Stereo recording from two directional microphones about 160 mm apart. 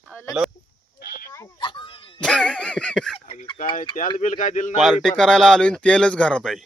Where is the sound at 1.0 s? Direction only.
70° left (ahead or behind).